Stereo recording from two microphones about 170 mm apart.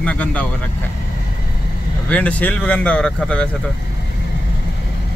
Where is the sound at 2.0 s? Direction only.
10° left (ahead or behind).